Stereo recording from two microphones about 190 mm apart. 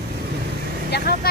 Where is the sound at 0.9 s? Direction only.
55° left (ahead or behind).